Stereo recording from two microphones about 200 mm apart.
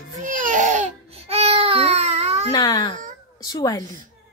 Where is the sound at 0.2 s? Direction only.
40° right (ahead or behind).